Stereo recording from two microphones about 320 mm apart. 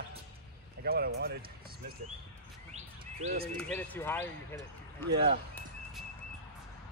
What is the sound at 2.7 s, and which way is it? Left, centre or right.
Chirp, right.